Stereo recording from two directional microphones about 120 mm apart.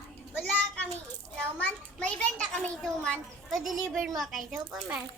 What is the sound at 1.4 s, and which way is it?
A child's voice, 10° left (ahead or behind).